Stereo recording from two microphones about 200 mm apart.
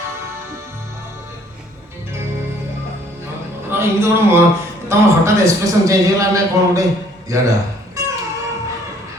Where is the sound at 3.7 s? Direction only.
10° right (ahead or behind).